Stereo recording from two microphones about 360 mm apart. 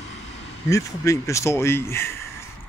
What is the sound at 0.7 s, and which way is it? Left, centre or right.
Speech, centre.